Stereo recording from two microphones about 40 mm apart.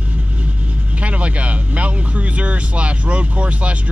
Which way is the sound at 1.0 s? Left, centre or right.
Right.